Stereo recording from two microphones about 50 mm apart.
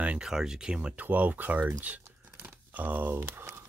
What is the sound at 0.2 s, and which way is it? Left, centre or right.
Speech, centre.